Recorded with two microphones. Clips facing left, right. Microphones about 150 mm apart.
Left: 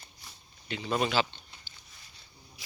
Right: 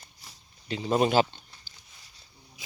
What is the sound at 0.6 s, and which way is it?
Speech, 35° right (ahead or behind).